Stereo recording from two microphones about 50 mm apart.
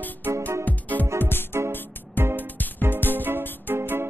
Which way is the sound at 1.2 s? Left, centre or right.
Left.